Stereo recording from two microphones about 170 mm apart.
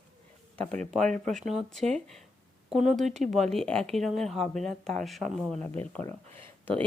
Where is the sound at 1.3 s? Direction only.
45° right (ahead or behind).